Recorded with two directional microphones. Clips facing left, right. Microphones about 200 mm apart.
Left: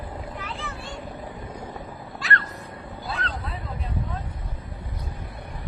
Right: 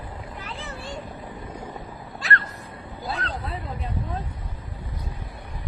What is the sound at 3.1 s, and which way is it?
Vehicle, 40° right (ahead or behind).